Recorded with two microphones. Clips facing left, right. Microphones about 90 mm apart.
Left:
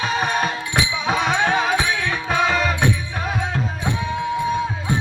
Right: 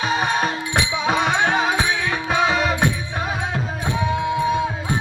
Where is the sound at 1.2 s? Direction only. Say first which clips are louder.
Left 1 dB; 15° right (ahead or behind).